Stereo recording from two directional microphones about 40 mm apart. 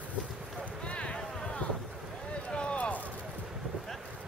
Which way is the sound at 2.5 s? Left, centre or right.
Left.